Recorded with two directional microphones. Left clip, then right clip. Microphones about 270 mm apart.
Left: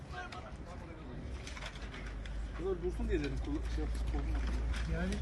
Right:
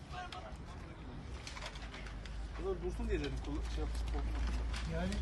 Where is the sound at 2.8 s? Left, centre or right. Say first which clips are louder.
Left 3 dB; right.